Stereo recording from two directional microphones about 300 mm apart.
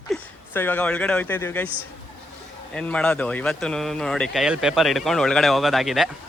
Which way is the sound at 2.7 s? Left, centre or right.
Centre.